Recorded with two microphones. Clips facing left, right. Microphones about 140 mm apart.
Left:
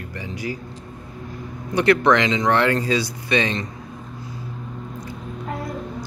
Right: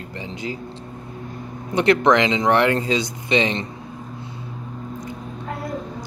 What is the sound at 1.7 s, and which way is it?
Speech, 20° right (ahead or behind).